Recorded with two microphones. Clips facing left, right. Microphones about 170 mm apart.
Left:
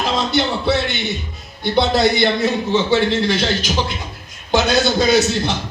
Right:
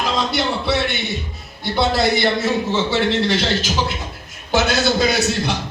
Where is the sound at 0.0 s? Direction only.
25° left (ahead or behind).